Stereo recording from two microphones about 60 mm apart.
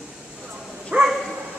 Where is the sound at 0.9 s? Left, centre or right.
Right.